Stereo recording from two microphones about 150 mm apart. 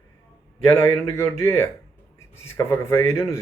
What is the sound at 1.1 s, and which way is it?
Speech, 15° left (ahead or behind).